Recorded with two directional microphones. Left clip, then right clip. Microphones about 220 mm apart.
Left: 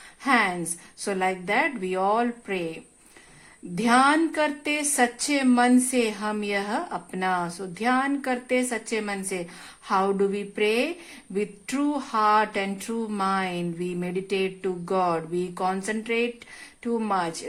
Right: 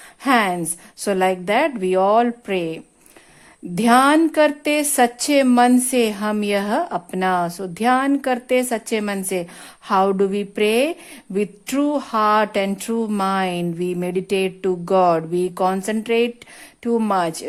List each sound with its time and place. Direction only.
0.2 s a woman's voice: 50° right (ahead or behind)